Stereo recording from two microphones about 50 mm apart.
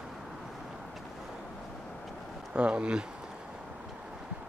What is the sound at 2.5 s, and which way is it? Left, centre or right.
Speech, right.